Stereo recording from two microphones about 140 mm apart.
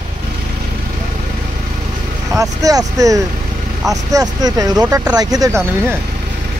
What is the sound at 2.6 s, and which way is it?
Speech, 25° right (ahead or behind).